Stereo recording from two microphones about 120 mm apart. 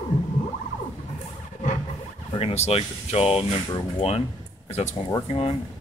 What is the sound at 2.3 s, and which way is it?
Speech, 55° left (ahead or behind).